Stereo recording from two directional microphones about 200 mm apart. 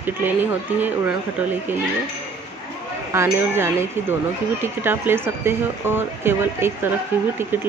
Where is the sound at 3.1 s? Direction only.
15° right (ahead or behind).